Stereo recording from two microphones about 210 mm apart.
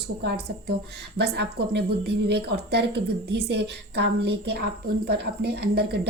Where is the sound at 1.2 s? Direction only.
55° right (ahead or behind).